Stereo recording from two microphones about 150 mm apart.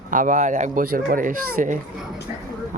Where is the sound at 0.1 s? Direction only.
60° right (ahead or behind).